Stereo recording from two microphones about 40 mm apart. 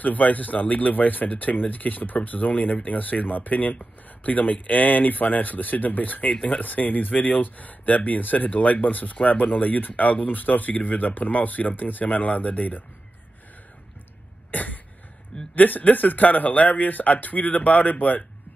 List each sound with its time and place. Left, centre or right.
0.0 s speech: left
6.3 s speech: left
6.6 s speech: left
14.5 s cough: left
15.5 s speech: left